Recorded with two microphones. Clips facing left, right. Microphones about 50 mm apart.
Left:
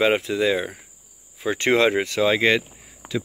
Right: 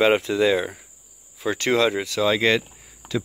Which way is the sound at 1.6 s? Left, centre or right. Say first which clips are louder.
Left 2 dB; left.